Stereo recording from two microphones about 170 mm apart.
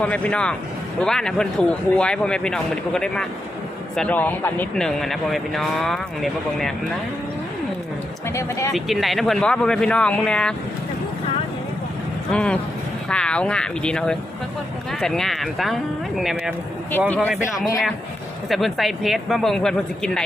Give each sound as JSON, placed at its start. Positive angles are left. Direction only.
{"t": 0.0, "sound": "speech", "side_deg": 5}
{"t": 8.3, "sound": "speech", "side_deg": 15}
{"t": 8.7, "sound": "speech", "side_deg": 0}
{"t": 12.3, "sound": "speech", "side_deg": 5}